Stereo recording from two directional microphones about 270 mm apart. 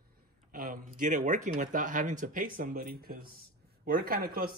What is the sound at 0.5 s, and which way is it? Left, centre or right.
Speech, right.